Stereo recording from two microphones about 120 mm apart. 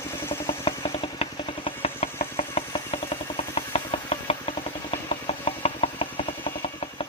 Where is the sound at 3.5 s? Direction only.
55° left (ahead or behind).